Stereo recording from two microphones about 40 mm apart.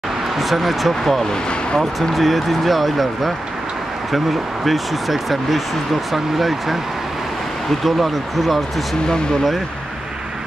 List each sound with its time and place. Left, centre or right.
0.4 s speech: centre
4.6 s speech: centre
7.8 s speech: centre